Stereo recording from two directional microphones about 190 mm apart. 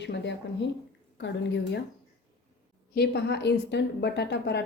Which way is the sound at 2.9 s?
60° left (ahead or behind).